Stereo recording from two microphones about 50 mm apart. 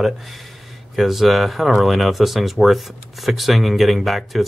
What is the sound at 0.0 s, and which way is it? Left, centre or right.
Speech, centre.